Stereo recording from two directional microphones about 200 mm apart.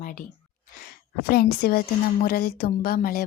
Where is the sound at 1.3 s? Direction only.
50° left (ahead or behind).